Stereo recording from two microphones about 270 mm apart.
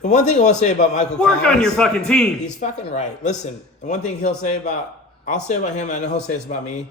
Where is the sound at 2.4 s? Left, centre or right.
Left.